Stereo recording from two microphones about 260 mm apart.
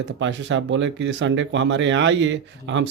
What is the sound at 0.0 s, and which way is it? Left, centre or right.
Speech, right.